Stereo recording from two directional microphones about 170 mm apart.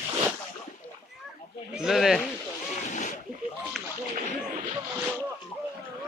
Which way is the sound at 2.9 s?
45° left (ahead or behind).